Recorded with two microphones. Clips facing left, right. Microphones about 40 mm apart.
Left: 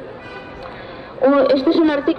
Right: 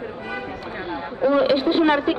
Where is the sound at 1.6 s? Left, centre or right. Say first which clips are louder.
Left 3 dB; right.